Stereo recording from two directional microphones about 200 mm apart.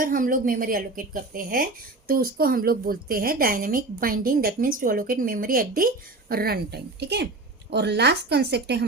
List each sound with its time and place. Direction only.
0.0 s a woman's voice: 45° right (ahead or behind)